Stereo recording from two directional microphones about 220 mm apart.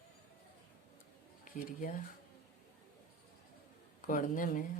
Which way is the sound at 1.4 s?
40° left (ahead or behind).